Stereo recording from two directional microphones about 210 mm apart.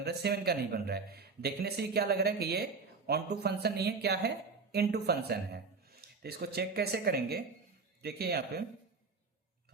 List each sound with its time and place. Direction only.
0.0 s a man's voice: 50° right (ahead or behind)